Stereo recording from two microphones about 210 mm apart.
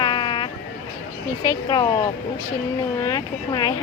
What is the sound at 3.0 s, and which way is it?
Speech, 20° left (ahead or behind).